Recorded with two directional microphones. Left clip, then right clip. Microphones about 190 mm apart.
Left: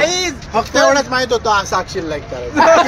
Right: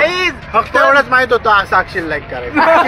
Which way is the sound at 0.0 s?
10° left (ahead or behind).